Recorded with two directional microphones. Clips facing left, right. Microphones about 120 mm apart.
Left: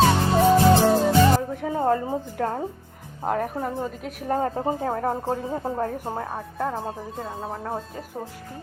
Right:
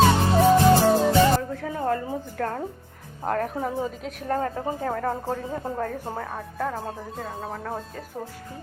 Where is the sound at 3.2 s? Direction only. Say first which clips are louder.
Left 1 dB; 5° left (ahead or behind).